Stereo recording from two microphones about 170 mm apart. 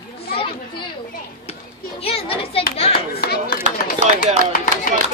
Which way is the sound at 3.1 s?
65° left (ahead or behind).